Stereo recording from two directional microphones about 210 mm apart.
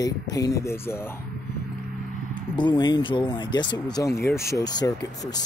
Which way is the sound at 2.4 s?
20° left (ahead or behind).